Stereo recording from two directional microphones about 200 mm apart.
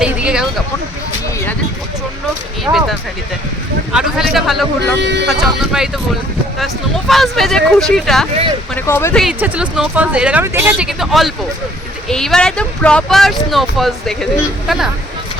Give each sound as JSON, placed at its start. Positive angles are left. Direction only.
{"t": 0.0, "sound": "a sound", "side_deg": -5}
{"t": 2.7, "sound": "speech", "side_deg": -15}
{"t": 3.9, "sound": "speech", "side_deg": 0}
{"t": 4.9, "sound": "speech", "side_deg": -60}
{"t": 5.3, "sound": "speech", "side_deg": 0}
{"t": 7.1, "sound": "speech", "side_deg": 0}
{"t": 8.7, "sound": "speech", "side_deg": 10}
{"t": 9.2, "sound": "speech", "side_deg": -5}